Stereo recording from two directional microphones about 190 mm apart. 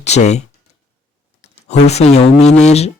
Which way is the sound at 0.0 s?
35° left (ahead or behind).